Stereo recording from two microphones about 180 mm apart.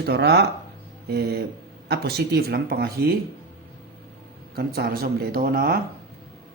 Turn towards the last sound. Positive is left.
turn(degrees=-55)  # may be behind; listen again after turning